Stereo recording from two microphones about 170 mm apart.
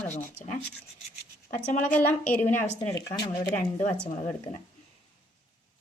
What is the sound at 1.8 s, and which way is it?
Speech, 10° left (ahead or behind).